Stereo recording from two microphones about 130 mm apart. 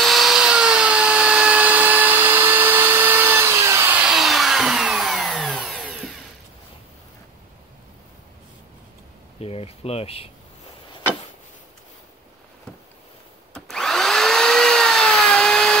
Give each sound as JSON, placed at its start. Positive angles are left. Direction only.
{"t": 0.0, "sound": "tools", "side_deg": 0}
{"t": 9.4, "sound": "speech", "side_deg": 50}
{"t": 13.5, "sound": "vacuum cleaner", "side_deg": 5}